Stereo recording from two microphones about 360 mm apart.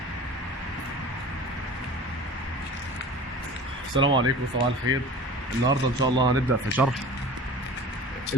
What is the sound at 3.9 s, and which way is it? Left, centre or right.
Speech, centre.